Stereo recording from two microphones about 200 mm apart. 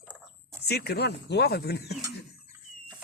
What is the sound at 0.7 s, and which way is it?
Speech, 55° left (ahead or behind).